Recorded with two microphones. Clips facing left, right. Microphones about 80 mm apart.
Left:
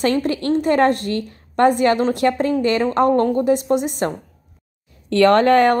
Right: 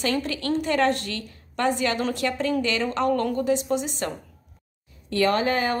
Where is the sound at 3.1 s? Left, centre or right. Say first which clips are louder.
Left 7 dB; left.